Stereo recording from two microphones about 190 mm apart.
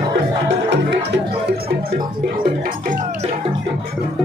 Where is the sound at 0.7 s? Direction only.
60° right (ahead or behind).